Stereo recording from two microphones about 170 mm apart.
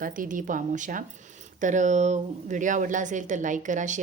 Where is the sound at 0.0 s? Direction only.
50° right (ahead or behind).